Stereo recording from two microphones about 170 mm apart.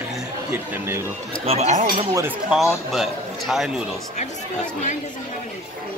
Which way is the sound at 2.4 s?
Centre (ahead or behind).